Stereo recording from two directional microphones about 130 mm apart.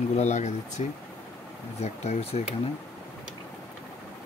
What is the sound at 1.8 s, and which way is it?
Speech, 55° left (ahead or behind).